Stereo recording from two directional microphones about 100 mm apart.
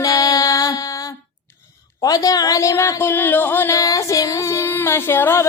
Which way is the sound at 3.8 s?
35° left (ahead or behind).